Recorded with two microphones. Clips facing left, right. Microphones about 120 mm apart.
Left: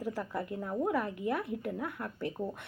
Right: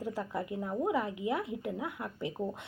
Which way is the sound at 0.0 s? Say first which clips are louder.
Even; 20° right (ahead or behind).